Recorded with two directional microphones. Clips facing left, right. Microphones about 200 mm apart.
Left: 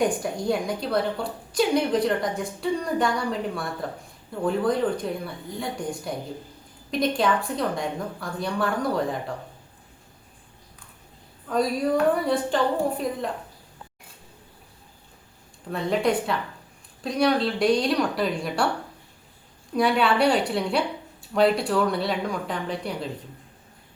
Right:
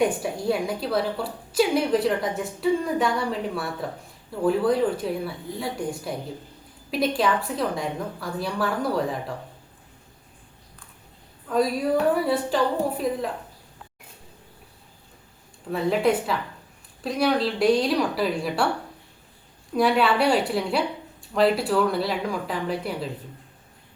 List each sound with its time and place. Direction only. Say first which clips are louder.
0.0 s a woman's voice: right 1 dB; 5° right (ahead or behind)
11.4 s a woman's voice: right 1 dB; centre (ahead or behind)
15.7 s a woman's voice: right 2 dB; 5° right (ahead or behind)
19.7 s a woman's voice: right 1 dB; centre (ahead or behind)